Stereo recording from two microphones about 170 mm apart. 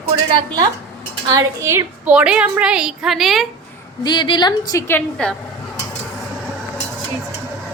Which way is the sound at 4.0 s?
25° left (ahead or behind).